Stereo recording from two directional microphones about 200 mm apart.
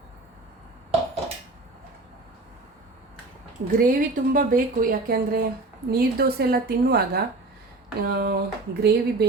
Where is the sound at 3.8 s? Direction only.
45° right (ahead or behind).